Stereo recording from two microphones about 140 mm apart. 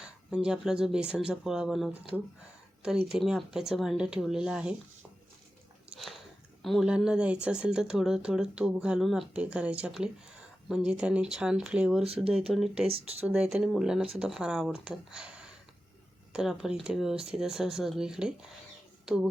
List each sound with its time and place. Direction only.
0.0 s speech: 5° right (ahead or behind)
5.9 s biting: centre (ahead or behind)
6.6 s speech: centre (ahead or behind)
12.0 s speech: 45° right (ahead or behind)
12.5 s speech: 5° right (ahead or behind)
12.9 s speech: 45° right (ahead or behind)
13.2 s speech: 5° right (ahead or behind)
16.3 s speech: 5° right (ahead or behind)